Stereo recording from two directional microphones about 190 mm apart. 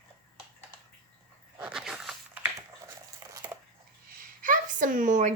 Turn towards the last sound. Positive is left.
turn(degrees=-40)  # may be behind; listen again after turning